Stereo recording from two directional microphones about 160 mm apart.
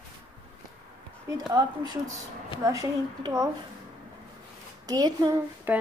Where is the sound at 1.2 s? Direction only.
25° right (ahead or behind).